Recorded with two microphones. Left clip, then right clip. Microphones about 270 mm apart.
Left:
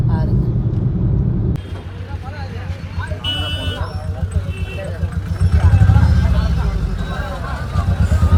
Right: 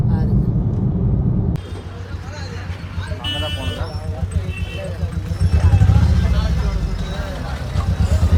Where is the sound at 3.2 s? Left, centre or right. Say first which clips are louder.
Left 2 dB; right.